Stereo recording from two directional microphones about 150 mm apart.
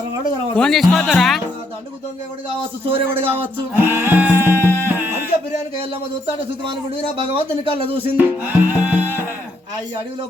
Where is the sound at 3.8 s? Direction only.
15° right (ahead or behind).